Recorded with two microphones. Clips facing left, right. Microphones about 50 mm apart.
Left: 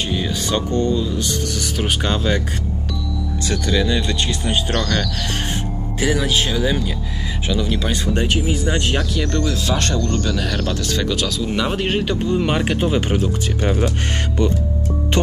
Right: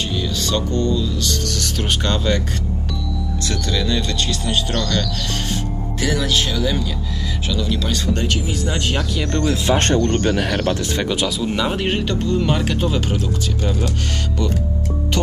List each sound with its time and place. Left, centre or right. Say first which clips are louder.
0.0 s speech: left 1 dB; left
3.4 s speech: left 3 dB; centre
9.4 s speech: right 3 dB; right
11.7 s a man's voice: left 1 dB; centre
12.0 s speech: left 1 dB; centre; by 13.9 s left